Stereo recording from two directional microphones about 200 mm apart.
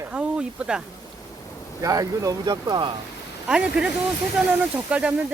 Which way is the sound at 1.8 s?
15° right (ahead or behind).